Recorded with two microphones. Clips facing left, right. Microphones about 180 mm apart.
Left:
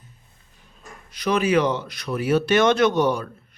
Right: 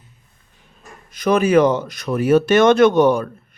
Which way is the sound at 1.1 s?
45° right (ahead or behind).